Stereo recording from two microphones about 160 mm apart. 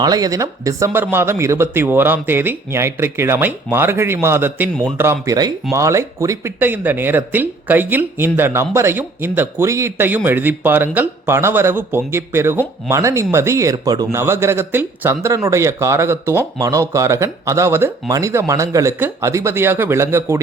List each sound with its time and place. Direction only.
0.0 s speech: 25° right (ahead or behind)